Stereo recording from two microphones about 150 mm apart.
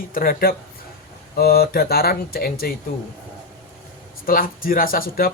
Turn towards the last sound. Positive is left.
turn(degrees=75)  # may be behind; listen again after turning